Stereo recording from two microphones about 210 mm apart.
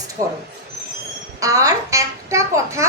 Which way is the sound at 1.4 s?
15° right (ahead or behind).